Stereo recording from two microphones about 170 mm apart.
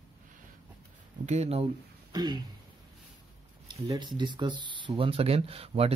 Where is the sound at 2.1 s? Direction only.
25° right (ahead or behind).